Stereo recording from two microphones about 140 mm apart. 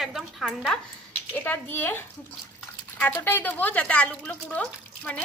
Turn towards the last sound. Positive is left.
turn(degrees=10)  # may be behind; listen again after turning